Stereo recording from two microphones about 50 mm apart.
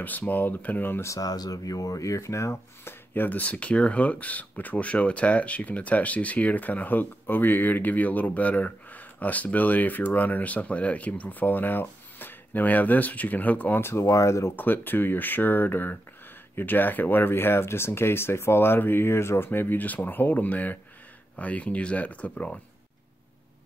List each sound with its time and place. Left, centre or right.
0.0 s speech: left
2.0 s speech: left
2.5 s speech: left
3.3 s speech: left
13.7 s speech: left
14.0 s speech: left
14.5 s speech: left